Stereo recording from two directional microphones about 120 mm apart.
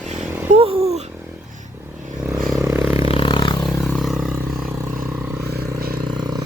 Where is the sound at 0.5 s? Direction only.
55° right (ahead or behind).